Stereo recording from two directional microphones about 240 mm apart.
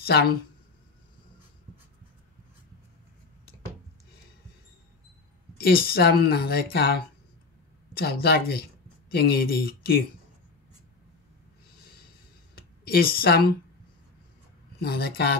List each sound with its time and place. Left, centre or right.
0.0 s speech: left
5.6 s speech: left
7.9 s speech: left
12.5 s speech: left
14.8 s speech: left